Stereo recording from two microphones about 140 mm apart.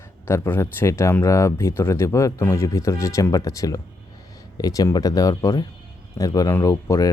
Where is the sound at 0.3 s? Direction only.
15° left (ahead or behind).